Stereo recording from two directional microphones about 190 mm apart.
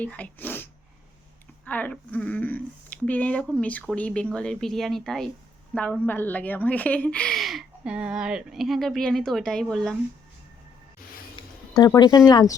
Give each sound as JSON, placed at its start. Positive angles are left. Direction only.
{"t": 0.0, "sound": "a woman's voice", "side_deg": 10}
{"t": 11.7, "sound": "speech", "side_deg": 20}